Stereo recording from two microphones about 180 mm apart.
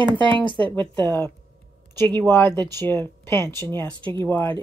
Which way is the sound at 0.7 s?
10° left (ahead or behind).